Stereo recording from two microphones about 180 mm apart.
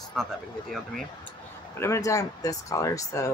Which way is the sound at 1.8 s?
15° left (ahead or behind).